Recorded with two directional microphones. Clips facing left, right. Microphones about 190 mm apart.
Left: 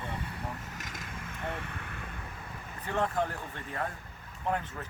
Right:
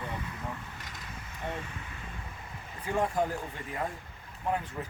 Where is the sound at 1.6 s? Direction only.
60° left (ahead or behind).